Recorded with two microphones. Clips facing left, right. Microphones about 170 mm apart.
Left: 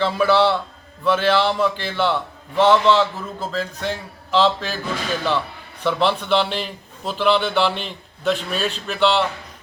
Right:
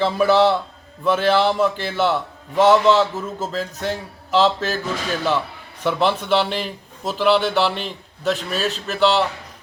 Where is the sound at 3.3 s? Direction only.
40° right (ahead or behind).